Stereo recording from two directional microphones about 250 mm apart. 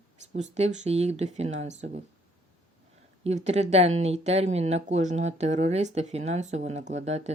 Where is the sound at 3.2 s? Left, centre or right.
Right.